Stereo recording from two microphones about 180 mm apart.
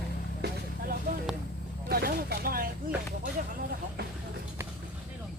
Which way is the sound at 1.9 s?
55° right (ahead or behind).